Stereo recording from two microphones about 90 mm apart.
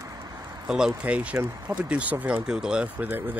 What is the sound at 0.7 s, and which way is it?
Speech, 10° right (ahead or behind).